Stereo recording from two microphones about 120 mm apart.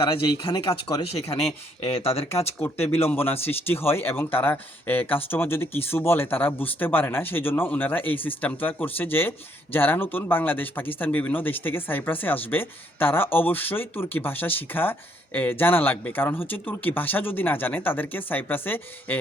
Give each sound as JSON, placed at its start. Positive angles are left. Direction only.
{"t": 0.0, "sound": "speech", "side_deg": 40}
{"t": 1.1, "sound": "speech", "side_deg": 55}
{"t": 2.6, "sound": "speech", "side_deg": 20}